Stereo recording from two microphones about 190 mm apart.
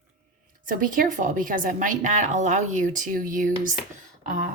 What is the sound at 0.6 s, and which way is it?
A woman's voice, 45° right (ahead or behind).